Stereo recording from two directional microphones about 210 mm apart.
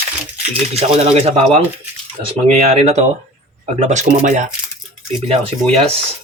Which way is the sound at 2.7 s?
30° right (ahead or behind).